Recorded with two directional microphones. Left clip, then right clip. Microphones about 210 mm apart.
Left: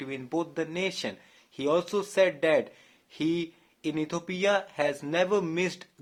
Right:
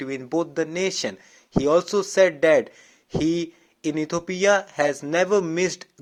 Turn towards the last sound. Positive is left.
turn(degrees=-25)  # may be behind; listen again after turning